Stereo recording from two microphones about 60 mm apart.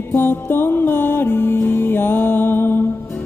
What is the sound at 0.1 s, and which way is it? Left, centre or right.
Music, left.